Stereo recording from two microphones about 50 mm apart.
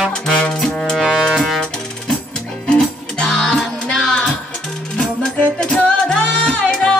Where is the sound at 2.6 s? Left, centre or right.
Centre.